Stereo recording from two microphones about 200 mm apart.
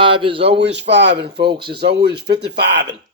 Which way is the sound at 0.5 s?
60° right (ahead or behind).